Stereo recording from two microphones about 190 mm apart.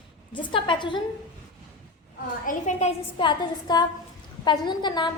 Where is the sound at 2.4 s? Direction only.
40° left (ahead or behind).